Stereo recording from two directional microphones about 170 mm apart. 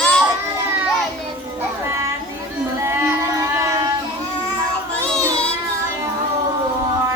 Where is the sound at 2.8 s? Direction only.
15° right (ahead or behind).